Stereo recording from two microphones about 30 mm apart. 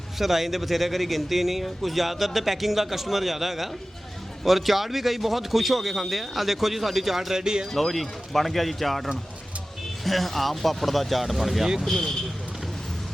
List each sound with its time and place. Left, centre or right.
0.2 s speech: centre
7.3 s speech: right
7.7 s speech: centre